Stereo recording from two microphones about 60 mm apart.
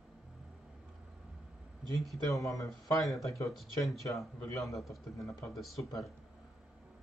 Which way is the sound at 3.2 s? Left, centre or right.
Left.